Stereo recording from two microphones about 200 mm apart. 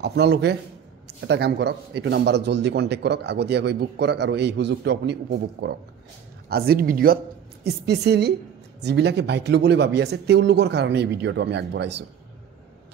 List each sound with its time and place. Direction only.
0.0 s a man's voice: 55° right (ahead or behind)